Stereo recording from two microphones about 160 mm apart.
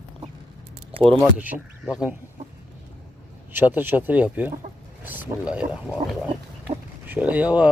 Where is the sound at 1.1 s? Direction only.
10° right (ahead or behind).